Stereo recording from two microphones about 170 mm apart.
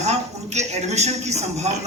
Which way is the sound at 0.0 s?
40° right (ahead or behind).